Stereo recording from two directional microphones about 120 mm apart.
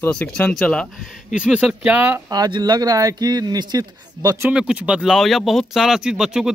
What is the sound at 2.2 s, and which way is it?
Speech, 35° right (ahead or behind).